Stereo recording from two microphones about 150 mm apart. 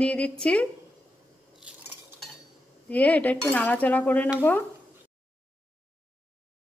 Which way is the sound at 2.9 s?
10° left (ahead or behind).